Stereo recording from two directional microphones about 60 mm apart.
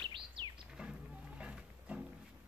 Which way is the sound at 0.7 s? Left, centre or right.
Centre.